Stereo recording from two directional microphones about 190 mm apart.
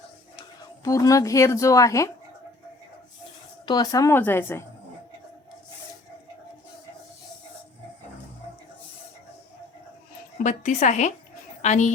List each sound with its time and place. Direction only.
0.9 s speech: 15° left (ahead or behind)
3.7 s speech: 20° left (ahead or behind)
10.3 s a woman's voice: 40° left (ahead or behind)